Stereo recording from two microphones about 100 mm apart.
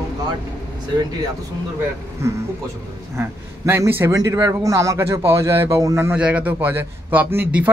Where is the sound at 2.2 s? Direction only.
25° right (ahead or behind).